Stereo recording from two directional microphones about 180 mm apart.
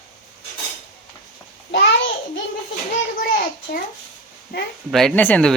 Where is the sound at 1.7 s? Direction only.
85° left.